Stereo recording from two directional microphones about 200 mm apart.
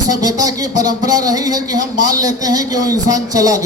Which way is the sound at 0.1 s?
20° right (ahead or behind).